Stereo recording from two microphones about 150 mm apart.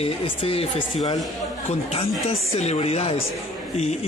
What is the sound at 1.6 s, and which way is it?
Speech, 40° left (ahead or behind).